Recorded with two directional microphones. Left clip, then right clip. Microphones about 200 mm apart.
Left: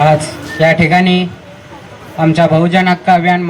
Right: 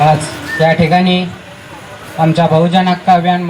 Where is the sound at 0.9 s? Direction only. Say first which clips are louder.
Left 1 dB; 20° left (ahead or behind).